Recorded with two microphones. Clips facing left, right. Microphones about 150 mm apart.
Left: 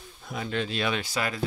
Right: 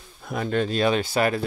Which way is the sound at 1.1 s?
55° right (ahead or behind).